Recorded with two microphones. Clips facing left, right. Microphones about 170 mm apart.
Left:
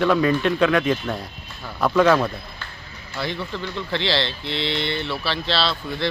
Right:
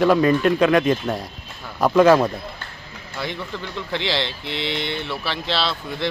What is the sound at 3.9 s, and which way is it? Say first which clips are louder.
Speech: left 1 dB; 15° right (ahead or behind).